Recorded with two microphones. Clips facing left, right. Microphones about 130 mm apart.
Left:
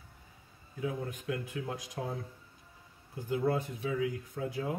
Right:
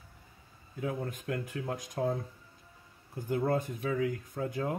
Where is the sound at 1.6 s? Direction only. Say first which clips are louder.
Right 5 dB; 45° right (ahead or behind).